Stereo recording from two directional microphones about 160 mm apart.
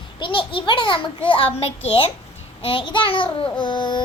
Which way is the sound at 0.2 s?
30° left (ahead or behind).